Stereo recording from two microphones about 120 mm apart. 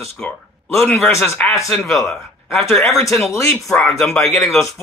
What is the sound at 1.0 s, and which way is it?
Speech, 20° left (ahead or behind).